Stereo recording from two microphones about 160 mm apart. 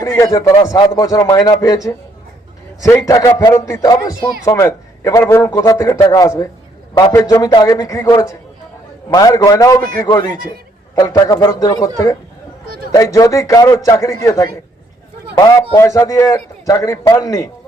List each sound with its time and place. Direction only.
0.0 s a man's voice: 20° left (ahead or behind)
12.6 s a sound: 65° right (ahead or behind)
12.9 s a man's voice: 20° left (ahead or behind)
15.7 s a man's voice: 20° left (ahead or behind)